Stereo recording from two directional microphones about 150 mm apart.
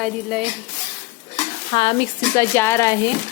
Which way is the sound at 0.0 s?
Centre (ahead or behind).